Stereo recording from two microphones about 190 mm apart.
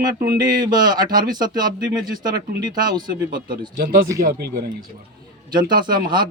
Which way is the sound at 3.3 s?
50° right (ahead or behind).